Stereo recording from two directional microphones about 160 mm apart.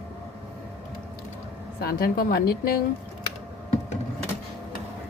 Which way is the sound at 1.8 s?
70° left (ahead or behind).